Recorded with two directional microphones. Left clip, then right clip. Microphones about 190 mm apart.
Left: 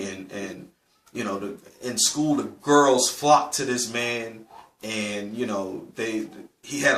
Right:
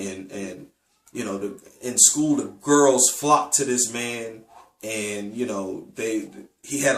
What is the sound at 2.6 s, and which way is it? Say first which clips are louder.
Speech: even; 15° right (ahead or behind).